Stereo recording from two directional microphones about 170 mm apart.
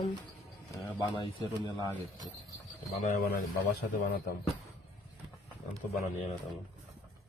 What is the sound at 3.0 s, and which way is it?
Speech, 45° left (ahead or behind).